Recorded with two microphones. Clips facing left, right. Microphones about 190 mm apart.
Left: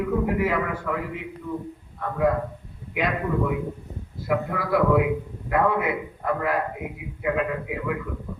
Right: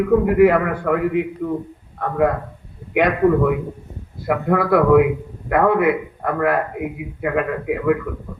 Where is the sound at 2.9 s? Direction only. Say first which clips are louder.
Right 9 dB; 65° right (ahead or behind).